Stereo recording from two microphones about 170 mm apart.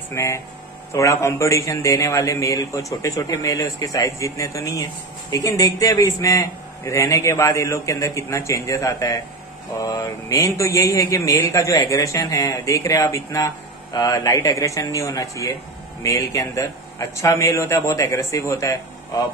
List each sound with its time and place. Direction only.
0.1 s a man's voice: 15° left (ahead or behind)